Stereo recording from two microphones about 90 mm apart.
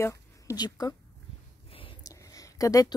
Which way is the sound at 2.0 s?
40° left (ahead or behind).